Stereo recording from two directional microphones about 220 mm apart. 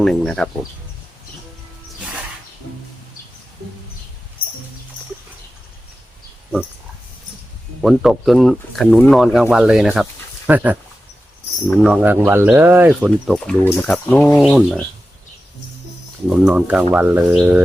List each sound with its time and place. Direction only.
0.0 s speech: 5° left (ahead or behind)
7.8 s speech: centre (ahead or behind)
16.2 s speech: 5° right (ahead or behind)